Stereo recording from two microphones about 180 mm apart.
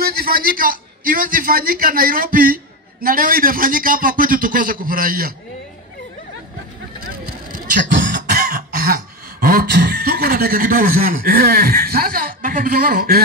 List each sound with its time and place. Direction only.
0.0 s a man's voice: 55° right (ahead or behind)
7.0 s vehicle: 50° right (ahead or behind)
8.1 s cough: 50° right (ahead or behind)
9.4 s speech: 55° right (ahead or behind)